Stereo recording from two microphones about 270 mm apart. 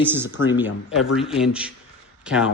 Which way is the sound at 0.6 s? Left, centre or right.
Left.